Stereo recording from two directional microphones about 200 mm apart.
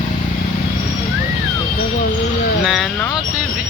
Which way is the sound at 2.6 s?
Centre (ahead or behind).